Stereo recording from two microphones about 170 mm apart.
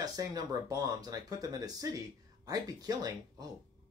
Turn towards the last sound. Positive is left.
turn(degrees=-20)  # may be behind; listen again after turning